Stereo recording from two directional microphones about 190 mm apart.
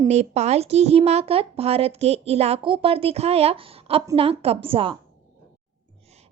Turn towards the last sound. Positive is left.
turn(degrees=-30)  # may be behind; listen again after turning